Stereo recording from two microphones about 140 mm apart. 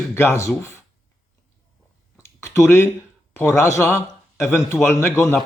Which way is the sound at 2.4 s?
20° left (ahead or behind).